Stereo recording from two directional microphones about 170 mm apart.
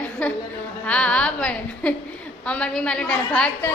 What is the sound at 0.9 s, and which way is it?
A woman's voice, 5° left (ahead or behind).